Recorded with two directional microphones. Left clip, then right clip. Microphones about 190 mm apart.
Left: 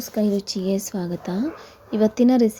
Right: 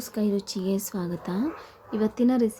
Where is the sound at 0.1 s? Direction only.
15° left (ahead or behind).